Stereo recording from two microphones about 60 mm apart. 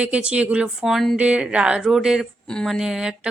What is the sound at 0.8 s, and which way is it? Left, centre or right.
Speech, centre.